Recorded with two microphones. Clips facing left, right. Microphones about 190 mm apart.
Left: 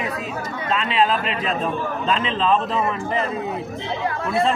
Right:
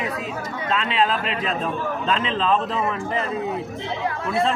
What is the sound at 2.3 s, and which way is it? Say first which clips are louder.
Speech: left 3 dB; centre (ahead or behind).